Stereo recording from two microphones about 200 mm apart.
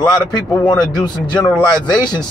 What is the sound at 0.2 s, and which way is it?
Speech, 20° left (ahead or behind).